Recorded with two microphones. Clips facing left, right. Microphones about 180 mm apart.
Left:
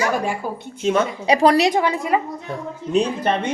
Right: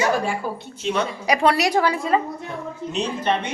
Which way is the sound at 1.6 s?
20° left (ahead or behind).